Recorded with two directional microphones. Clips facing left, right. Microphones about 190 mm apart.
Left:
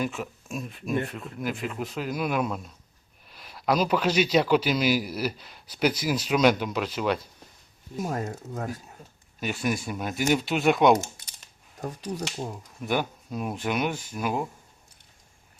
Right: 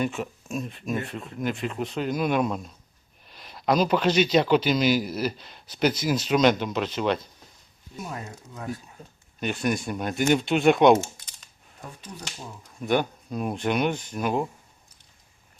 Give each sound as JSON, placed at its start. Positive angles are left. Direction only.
{"t": 0.0, "sound": "speech", "side_deg": 0}
{"t": 7.9, "sound": "speech", "side_deg": 45}
{"t": 9.4, "sound": "speech", "side_deg": 5}
{"t": 11.8, "sound": "speech", "side_deg": 40}
{"t": 12.8, "sound": "speech", "side_deg": 5}